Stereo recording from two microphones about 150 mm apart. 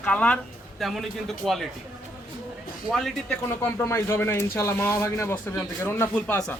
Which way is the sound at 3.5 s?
15° left (ahead or behind).